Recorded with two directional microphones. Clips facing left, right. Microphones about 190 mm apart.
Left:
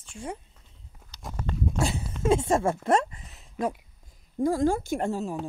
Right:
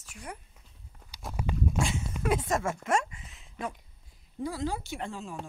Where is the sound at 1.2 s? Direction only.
10° right (ahead or behind).